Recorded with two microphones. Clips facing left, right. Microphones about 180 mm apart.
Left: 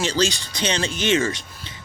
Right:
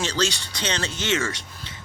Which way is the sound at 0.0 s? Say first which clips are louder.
Left 3 dB; 10° left (ahead or behind).